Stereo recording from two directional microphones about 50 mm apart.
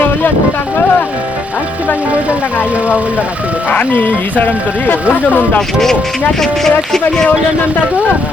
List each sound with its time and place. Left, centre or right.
3.7 s speech: left
5.5 s speech: centre